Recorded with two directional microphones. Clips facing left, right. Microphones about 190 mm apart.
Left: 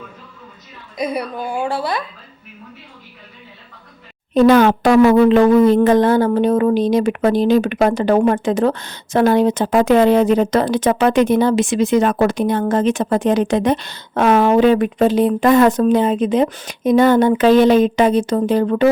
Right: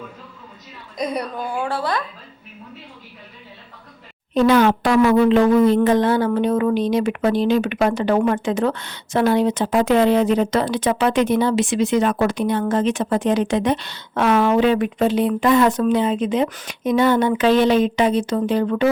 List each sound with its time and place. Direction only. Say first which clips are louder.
0.9 s a woman's voice: left 2 dB; 5° left (ahead or behind)
4.4 s speech: left 4 dB; 45° left (ahead or behind)